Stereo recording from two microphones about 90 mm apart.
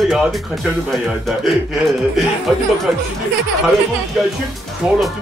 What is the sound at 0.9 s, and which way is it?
Speech, 5° right (ahead or behind).